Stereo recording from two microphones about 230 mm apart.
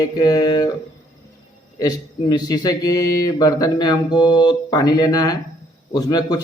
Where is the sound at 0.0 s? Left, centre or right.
Centre.